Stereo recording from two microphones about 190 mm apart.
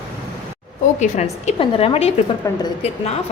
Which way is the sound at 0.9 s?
35° left (ahead or behind).